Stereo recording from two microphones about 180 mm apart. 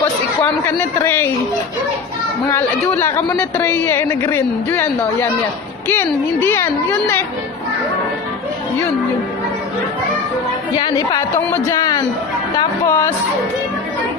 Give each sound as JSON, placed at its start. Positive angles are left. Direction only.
{"t": 0.4, "sound": "speech", "side_deg": 10}
{"t": 2.4, "sound": "speech", "side_deg": 15}
{"t": 10.8, "sound": "a woman's voice", "side_deg": 25}
{"t": 12.5, "sound": "a sound", "side_deg": 15}